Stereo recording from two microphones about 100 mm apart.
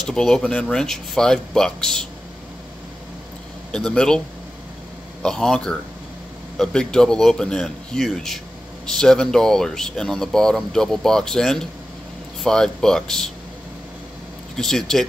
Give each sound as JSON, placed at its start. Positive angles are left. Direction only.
{"t": 0.0, "sound": "speech", "side_deg": 5}
{"t": 3.7, "sound": "speech", "side_deg": 10}
{"t": 5.2, "sound": "speech", "side_deg": 5}
{"t": 14.5, "sound": "speech", "side_deg": 5}